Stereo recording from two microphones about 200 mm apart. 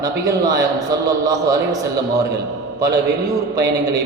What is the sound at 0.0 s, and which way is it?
A man's voice, 20° right (ahead or behind).